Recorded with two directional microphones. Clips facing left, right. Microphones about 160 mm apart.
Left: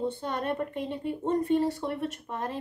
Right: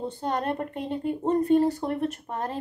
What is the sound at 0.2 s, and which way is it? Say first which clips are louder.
A woman's voice: right 3 dB; 40° right (ahead or behind).